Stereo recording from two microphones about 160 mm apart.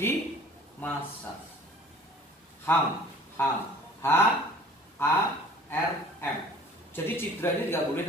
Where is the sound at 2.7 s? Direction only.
10° left (ahead or behind).